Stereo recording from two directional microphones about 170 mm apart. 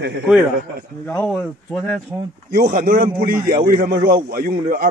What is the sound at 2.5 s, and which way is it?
A man's voice, 55° right (ahead or behind).